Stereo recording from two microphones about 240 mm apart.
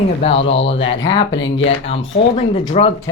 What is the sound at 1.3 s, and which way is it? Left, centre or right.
Speech, left.